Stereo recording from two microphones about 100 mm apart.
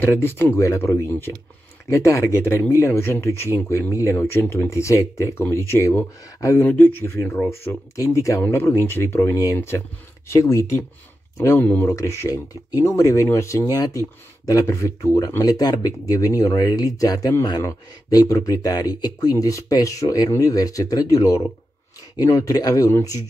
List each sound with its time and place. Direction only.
0.0 s speech: 20° left (ahead or behind)
11.6 s speech: 15° left (ahead or behind)
11.9 s speech: 30° left (ahead or behind)